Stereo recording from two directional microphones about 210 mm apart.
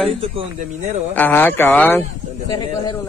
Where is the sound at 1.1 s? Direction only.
10° left (ahead or behind).